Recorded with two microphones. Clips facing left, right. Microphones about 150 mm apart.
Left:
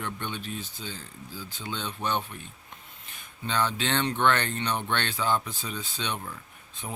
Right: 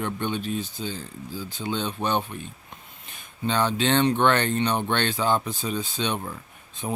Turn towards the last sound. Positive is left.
turn(degrees=-30)  # may be behind; listen again after turning